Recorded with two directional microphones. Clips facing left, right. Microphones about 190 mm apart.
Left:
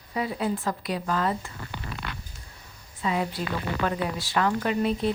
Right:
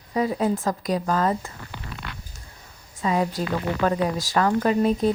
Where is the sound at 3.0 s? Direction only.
40° right (ahead or behind).